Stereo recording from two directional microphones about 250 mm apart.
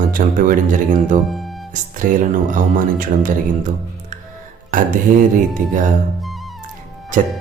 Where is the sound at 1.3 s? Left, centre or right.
Centre.